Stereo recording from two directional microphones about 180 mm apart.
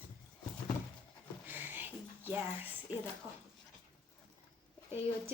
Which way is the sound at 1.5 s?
10° right (ahead or behind).